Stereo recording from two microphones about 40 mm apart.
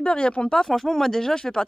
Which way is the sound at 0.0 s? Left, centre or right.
Left.